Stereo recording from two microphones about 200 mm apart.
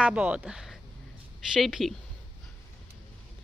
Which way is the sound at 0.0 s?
5° right (ahead or behind).